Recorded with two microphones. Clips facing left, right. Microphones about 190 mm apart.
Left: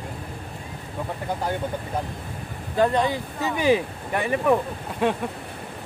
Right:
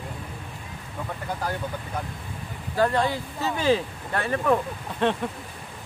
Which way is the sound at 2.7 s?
20° left (ahead or behind).